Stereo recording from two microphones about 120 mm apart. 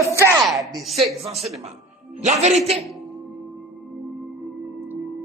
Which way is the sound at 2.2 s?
75° right (ahead or behind).